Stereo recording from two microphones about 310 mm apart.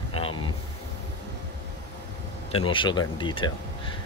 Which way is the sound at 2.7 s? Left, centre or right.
Centre.